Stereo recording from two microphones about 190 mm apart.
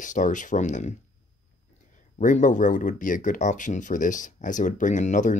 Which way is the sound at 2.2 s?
40° left (ahead or behind).